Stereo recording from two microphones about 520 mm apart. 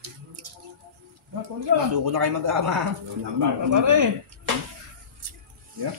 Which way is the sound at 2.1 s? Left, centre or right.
Right.